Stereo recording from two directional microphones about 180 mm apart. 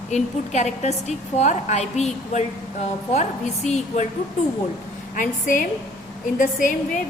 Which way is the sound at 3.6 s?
40° left (ahead or behind).